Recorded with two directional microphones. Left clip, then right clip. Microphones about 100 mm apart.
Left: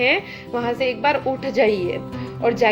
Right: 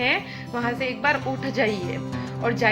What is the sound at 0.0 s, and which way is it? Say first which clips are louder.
A woman's voice: left 4 dB; 35° left (ahead or behind).